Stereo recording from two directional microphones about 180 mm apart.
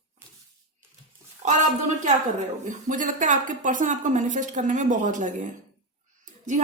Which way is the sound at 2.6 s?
45° right (ahead or behind).